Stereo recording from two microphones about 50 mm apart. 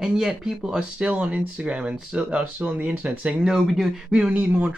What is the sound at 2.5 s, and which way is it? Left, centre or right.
Speech, right.